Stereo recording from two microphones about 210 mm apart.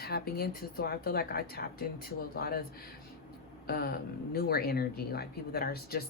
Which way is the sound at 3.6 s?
45° left (ahead or behind).